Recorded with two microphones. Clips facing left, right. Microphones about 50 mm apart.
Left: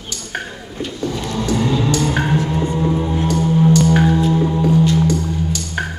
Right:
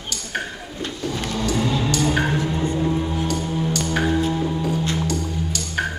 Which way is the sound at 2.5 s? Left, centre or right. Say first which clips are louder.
Left 3 dB; centre.